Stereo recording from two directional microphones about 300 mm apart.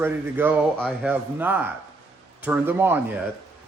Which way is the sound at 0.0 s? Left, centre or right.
Centre.